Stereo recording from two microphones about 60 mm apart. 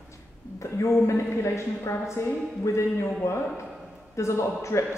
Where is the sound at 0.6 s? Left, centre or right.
Left.